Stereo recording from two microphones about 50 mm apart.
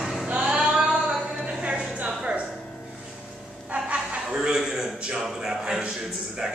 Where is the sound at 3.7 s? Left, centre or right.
Right.